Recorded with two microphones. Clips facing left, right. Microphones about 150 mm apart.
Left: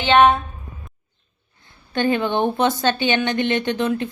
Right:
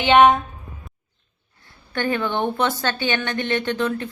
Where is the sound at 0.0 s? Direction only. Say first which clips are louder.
Right 1 dB; 15° right (ahead or behind).